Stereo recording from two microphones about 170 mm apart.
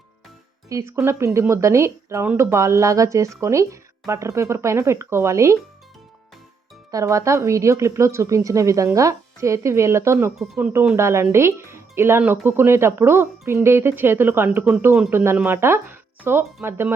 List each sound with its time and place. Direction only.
0.7 s speech: 15° right (ahead or behind)
6.9 s speech: 20° right (ahead or behind)
10.3 s speech: centre (ahead or behind)
10.7 s speech: 15° right (ahead or behind)